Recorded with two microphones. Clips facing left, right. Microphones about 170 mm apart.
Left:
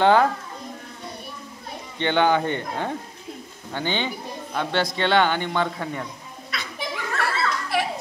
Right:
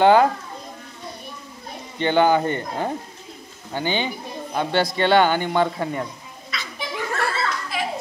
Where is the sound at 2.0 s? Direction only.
5° right (ahead or behind).